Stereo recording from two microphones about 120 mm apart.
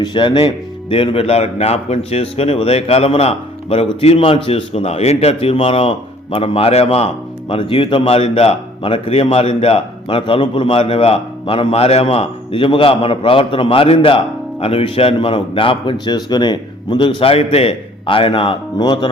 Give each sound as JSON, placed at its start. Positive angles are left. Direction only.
{"t": 0.0, "sound": "a man's voice", "side_deg": 40}
{"t": 7.5, "sound": "a man's voice", "side_deg": 45}